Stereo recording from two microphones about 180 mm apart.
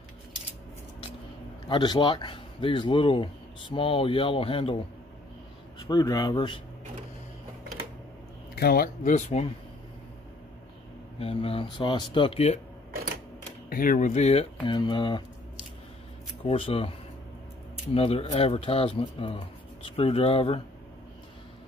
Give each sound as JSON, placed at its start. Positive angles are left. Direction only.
{"t": 1.7, "sound": "speech", "side_deg": 25}
{"t": 5.9, "sound": "speech", "side_deg": 20}
{"t": 8.5, "sound": "speech", "side_deg": 55}
{"t": 11.1, "sound": "speech", "side_deg": 30}
{"t": 13.7, "sound": "speech", "side_deg": 50}
{"t": 16.4, "sound": "speech", "side_deg": 30}
{"t": 17.9, "sound": "speech", "side_deg": 35}